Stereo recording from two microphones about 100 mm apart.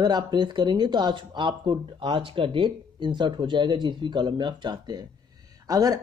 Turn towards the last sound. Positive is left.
turn(degrees=-40)  # may be behind; listen again after turning